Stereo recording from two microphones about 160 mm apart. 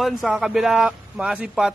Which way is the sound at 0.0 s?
Centre (ahead or behind).